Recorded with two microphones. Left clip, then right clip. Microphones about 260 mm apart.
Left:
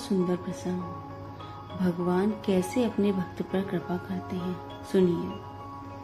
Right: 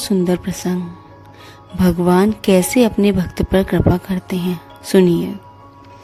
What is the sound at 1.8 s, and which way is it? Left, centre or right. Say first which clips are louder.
A woman's voice: right 13 dB; right.